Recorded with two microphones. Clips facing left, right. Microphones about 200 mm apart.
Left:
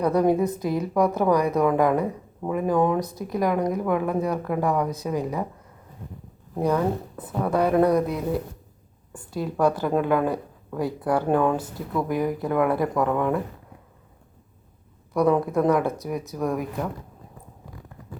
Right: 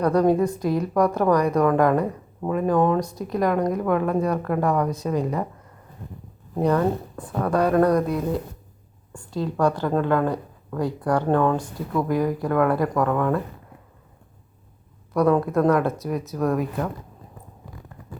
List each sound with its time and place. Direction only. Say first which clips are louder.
0.0 s speech: right 1 dB; 10° left (ahead or behind)
0.8 s a woman's voice: even; 5° left (ahead or behind)
6.5 s speech: right 2 dB; centre (ahead or behind)
12.0 s speech: right 2 dB; 20° left (ahead or behind)
15.2 s speech: right 1 dB; 15° left (ahead or behind)